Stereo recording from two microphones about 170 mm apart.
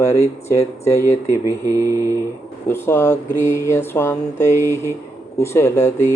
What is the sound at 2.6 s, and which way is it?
Mantra, 15° left (ahead or behind).